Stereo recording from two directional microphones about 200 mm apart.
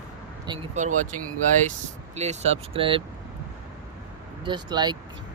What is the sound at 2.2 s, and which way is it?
Speech, 35° right (ahead or behind).